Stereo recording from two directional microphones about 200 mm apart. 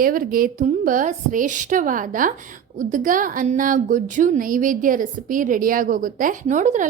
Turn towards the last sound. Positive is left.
turn(degrees=-40)  # may be behind; listen again after turning